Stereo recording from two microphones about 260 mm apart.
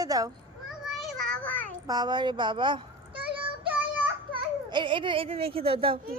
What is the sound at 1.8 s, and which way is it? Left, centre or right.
A woman's voice, centre.